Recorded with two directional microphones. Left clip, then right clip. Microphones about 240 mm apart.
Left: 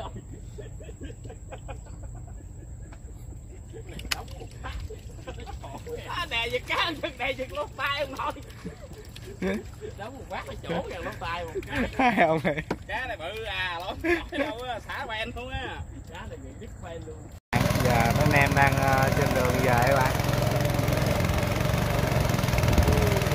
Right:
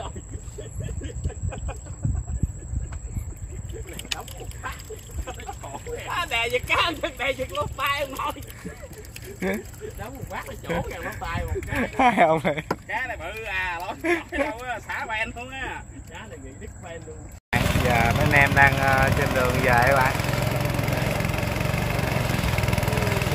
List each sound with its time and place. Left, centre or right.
1.2 s a sound: right
5.2 s a sound: right
9.9 s speech: right
11.8 s speech: centre
15.3 s speech: centre
17.5 s vehicle: centre